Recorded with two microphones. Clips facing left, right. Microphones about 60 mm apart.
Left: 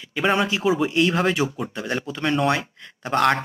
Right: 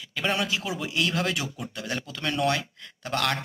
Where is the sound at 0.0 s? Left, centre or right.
Left.